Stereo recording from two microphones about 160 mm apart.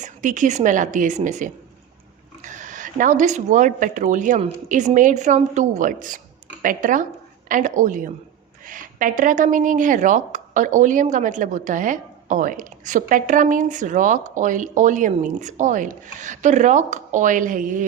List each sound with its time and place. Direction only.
0.0 s a woman's voice: 55° right (ahead or behind)